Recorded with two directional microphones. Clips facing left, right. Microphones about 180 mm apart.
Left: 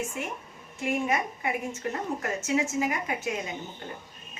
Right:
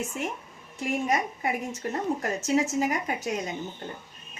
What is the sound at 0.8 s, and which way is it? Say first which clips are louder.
Speech: right 1 dB; 40° right (ahead or behind).